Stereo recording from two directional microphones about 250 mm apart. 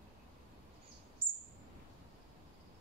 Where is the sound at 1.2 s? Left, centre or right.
Right.